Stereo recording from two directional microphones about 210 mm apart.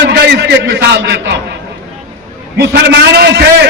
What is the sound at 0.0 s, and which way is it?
A man's voice, 55° right (ahead or behind).